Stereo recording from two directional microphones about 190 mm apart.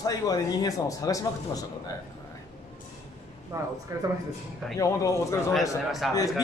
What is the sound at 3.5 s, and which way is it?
Speech, 15° right (ahead or behind).